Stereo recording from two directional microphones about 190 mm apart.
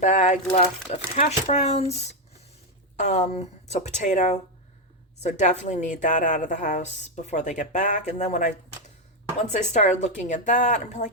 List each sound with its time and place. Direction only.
0.0 s a woman's voice: 40° left (ahead or behind)